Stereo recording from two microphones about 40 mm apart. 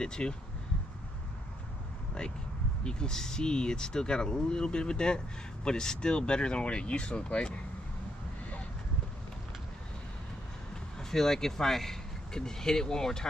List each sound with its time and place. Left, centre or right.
0.0 s speech: left
2.8 s speech: left
11.0 s speech: centre